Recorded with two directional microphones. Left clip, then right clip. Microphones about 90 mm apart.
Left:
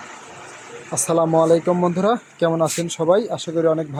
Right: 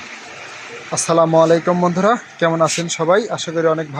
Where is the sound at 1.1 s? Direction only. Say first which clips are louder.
Right 3 dB; 5° left (ahead or behind).